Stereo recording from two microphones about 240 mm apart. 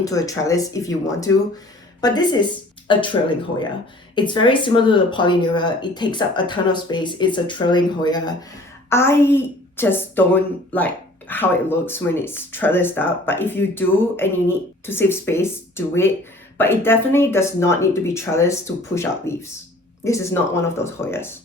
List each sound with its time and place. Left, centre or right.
0.0 s a woman's voice: centre